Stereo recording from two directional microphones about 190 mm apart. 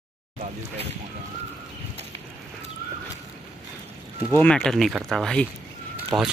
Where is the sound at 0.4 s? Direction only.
30° right (ahead or behind).